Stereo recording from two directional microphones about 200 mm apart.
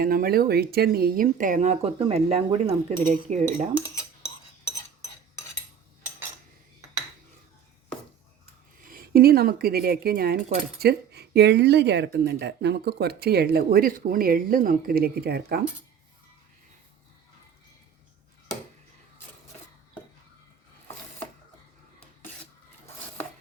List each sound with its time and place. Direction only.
0.0 s speech: 45° right (ahead or behind)
8.9 s speech: 50° right (ahead or behind)